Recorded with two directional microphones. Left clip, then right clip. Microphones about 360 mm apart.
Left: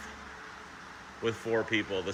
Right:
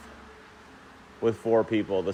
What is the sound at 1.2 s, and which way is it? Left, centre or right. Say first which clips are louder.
Speech: right 7 dB; centre.